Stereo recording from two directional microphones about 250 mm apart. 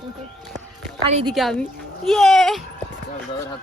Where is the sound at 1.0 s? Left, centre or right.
Right.